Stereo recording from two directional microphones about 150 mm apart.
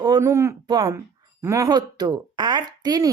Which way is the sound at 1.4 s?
20° right (ahead or behind).